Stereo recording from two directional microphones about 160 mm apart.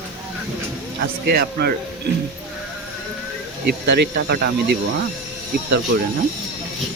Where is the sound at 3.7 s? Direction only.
85° right.